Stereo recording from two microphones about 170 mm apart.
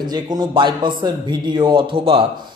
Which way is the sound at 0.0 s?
25° right (ahead or behind).